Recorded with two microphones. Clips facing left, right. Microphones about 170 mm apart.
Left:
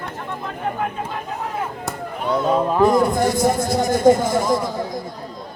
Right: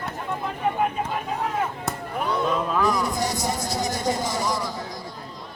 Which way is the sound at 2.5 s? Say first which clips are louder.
Left 10 dB; 40° left (ahead or behind).